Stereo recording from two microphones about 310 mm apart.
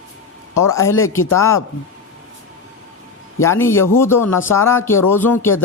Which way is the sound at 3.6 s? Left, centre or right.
Centre.